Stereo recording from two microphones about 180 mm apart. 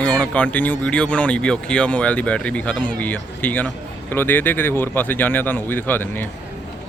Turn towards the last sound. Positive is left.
turn(degrees=10)  # may be behind; listen again after turning